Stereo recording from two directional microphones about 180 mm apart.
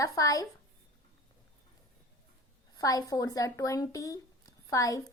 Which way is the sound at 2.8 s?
20° left (ahead or behind).